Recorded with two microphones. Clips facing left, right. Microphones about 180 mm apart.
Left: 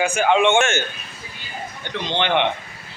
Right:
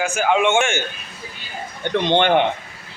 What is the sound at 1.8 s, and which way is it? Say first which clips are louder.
Speech: right 7 dB; 55° right (ahead or behind).